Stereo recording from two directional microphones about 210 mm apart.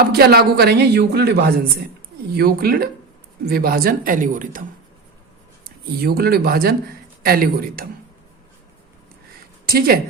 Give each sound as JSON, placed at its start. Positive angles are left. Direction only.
{"t": 0.0, "sound": "speech", "side_deg": -45}
{"t": 5.6, "sound": "speech", "side_deg": -45}
{"t": 9.6, "sound": "speech", "side_deg": -45}